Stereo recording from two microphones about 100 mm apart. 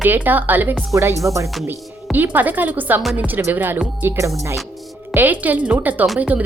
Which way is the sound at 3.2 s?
20° right (ahead or behind).